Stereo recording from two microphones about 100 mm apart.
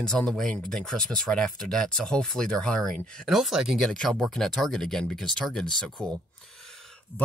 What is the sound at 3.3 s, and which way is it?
Speech, 5° right (ahead or behind).